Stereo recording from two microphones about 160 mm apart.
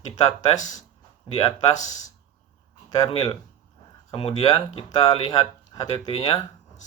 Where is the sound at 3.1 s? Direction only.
30° left (ahead or behind).